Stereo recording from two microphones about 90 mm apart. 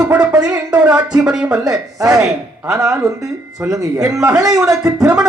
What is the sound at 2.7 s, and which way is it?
Speech, 35° right (ahead or behind).